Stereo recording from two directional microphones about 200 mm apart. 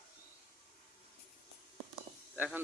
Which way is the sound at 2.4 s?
10° right (ahead or behind).